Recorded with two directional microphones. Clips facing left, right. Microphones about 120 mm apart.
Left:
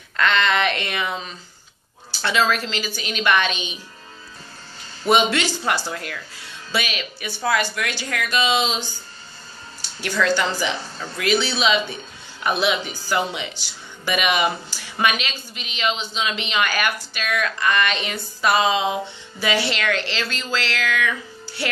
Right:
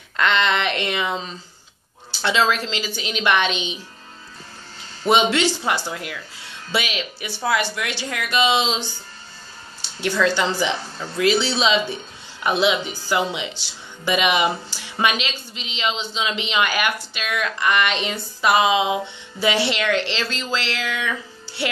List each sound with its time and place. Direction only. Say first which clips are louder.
0.2 s speech: even; 20° right (ahead or behind)
5.0 s speech: right 1 dB; 25° right (ahead or behind)